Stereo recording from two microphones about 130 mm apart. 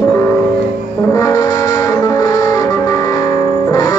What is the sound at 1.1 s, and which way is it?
Music, 25° left (ahead or behind).